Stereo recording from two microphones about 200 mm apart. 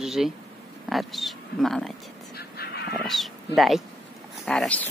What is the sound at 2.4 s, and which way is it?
Dog, 50° left (ahead or behind).